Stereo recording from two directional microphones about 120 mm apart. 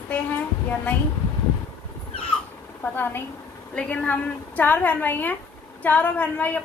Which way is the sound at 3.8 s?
10° left (ahead or behind).